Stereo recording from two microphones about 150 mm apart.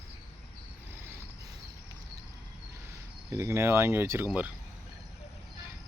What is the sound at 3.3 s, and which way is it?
Speech, 20° right (ahead or behind).